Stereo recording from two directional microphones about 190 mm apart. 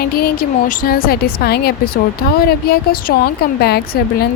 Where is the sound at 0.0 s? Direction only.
50° left (ahead or behind).